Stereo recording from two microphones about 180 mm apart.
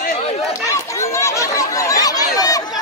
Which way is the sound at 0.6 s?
15° left (ahead or behind).